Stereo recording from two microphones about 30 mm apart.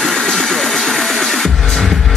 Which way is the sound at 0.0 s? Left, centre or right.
Left.